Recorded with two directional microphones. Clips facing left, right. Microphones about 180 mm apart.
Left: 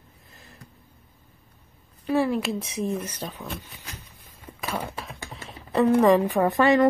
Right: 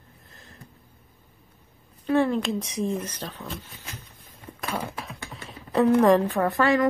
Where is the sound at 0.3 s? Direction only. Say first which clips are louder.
Even; centre (ahead or behind).